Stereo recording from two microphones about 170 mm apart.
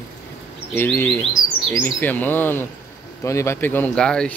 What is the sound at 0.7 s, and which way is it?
Speech, 10° left (ahead or behind).